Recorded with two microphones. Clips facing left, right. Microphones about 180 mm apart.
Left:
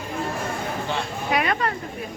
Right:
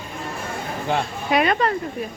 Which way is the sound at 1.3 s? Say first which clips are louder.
Right 4 dB; 25° right (ahead or behind).